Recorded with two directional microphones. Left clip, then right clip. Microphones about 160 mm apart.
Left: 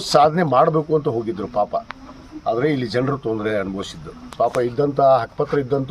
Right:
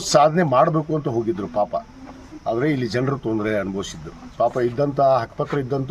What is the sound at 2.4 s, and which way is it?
Speech, 15° right (ahead or behind).